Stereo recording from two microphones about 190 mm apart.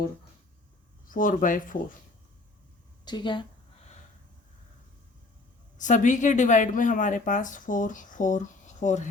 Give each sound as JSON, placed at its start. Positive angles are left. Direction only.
{"t": 1.1, "sound": "speech", "side_deg": 45}
{"t": 3.0, "sound": "a woman's voice", "side_deg": 25}
{"t": 5.7, "sound": "speech", "side_deg": 40}